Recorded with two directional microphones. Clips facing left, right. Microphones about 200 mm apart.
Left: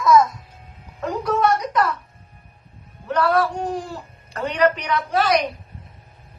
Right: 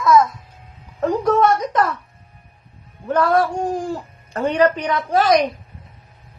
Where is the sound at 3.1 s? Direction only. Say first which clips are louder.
Right 2 dB; 45° right (ahead or behind).